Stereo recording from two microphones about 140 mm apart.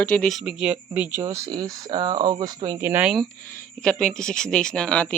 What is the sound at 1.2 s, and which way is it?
Speech, 25° right (ahead or behind).